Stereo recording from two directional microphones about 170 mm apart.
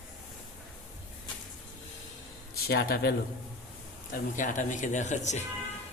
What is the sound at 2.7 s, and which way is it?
Speech, 65° left (ahead or behind).